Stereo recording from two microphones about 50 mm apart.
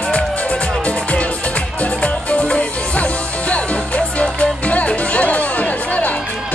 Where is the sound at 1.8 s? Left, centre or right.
Left.